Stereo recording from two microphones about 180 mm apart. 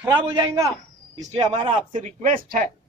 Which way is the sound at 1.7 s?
45° right (ahead or behind).